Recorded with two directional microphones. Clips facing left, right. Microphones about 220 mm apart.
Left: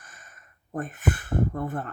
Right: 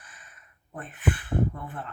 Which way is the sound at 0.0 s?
45° left (ahead or behind).